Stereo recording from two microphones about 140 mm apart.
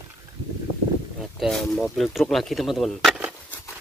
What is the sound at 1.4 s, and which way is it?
Speech, 5° left (ahead or behind).